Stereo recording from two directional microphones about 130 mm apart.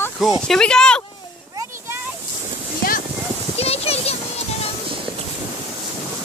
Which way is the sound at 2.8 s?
90° left.